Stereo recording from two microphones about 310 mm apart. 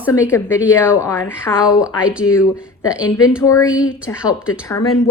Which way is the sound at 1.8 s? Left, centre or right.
Centre.